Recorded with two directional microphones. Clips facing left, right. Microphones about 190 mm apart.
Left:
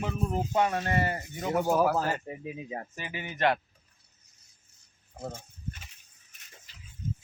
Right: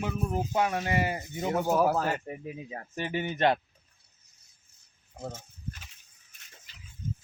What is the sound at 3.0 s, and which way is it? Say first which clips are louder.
Speech: right 5 dB; 35° right (ahead or behind).